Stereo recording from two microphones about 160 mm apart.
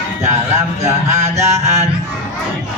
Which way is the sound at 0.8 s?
20° right (ahead or behind).